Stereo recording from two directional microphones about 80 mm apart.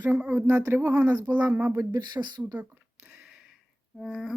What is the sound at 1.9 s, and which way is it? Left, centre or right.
Speech, right.